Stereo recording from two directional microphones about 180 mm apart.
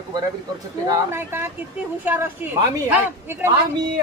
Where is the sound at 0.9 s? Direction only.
15° right (ahead or behind).